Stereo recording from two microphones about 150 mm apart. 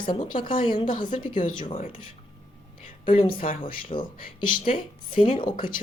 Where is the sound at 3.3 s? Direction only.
65° left (ahead or behind).